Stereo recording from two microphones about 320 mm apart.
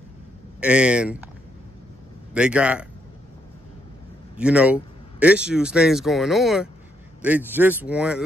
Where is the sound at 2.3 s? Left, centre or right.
Centre.